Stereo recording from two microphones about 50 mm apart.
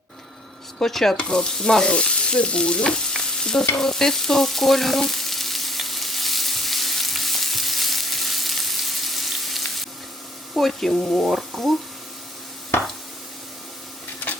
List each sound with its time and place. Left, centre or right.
0.8 s stir: centre
3.8 s frying: centre
10.5 s speech: centre